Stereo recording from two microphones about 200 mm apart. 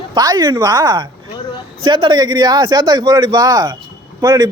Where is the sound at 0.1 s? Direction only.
20° right (ahead or behind).